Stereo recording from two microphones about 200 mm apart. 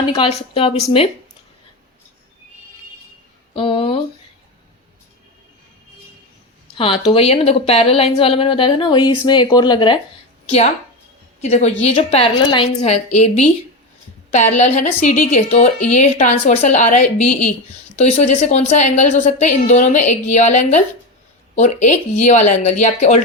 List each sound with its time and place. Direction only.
0.1 s speech: 30° left (ahead or behind)
3.5 s a sound: 25° left (ahead or behind)
6.7 s speech: 25° left (ahead or behind)
11.3 s a woman's voice: 35° left (ahead or behind)